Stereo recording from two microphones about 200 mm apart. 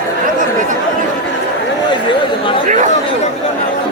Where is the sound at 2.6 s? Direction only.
40° right (ahead or behind).